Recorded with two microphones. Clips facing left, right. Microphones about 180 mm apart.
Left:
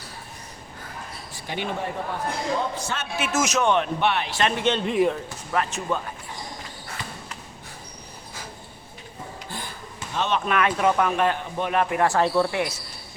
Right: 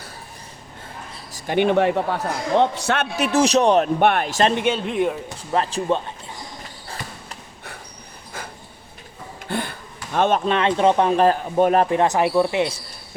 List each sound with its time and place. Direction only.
1.3 s a man's voice: 55° right (ahead or behind)
3.2 s speech: 35° right (ahead or behind)
4.6 s speech: 5° right (ahead or behind)
5.5 s speech: 30° right (ahead or behind)
9.5 s a sound: 65° right (ahead or behind)
10.4 s speech: 30° right (ahead or behind)
11.9 s speech: 20° right (ahead or behind)